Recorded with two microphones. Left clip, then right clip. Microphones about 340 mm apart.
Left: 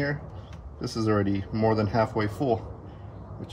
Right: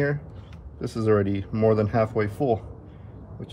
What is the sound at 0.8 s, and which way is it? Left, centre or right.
Speech, right.